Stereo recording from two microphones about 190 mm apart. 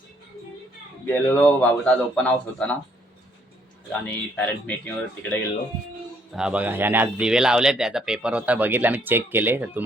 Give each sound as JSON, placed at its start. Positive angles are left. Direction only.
{"t": 1.0, "sound": "a man's voice", "side_deg": 10}
{"t": 4.0, "sound": "a man's voice", "side_deg": 10}
{"t": 6.3, "sound": "speech", "side_deg": -5}